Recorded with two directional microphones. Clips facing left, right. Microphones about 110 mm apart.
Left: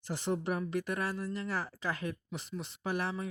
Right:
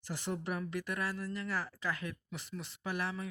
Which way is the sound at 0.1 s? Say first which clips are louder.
Left 4 dB; 25° left (ahead or behind).